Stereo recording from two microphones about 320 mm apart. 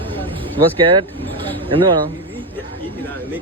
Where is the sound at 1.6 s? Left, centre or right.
Centre.